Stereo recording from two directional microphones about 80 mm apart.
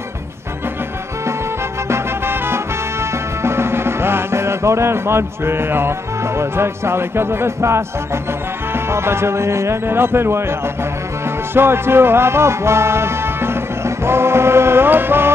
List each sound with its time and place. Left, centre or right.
1.9 s music: right
8.7 s speech: right
11.5 s music: right